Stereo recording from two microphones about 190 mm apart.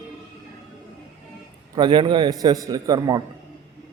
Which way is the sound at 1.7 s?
25° right (ahead or behind).